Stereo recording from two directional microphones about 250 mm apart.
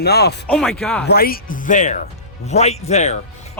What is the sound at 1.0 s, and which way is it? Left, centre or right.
Speech, left.